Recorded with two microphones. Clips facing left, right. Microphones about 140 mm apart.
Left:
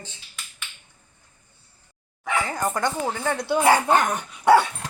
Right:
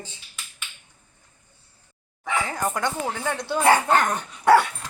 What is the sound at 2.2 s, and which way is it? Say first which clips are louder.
Speech: left 1 dB; centre (ahead or behind).